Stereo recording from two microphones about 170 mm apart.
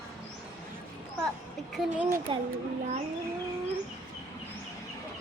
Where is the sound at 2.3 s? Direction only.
30° right (ahead or behind).